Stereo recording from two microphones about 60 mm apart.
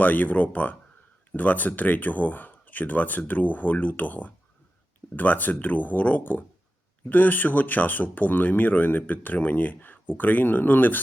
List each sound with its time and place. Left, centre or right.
0.0 s speech: left